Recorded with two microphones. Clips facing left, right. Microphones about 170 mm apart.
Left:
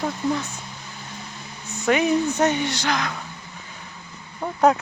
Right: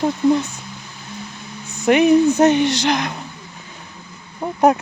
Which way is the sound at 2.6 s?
90° right.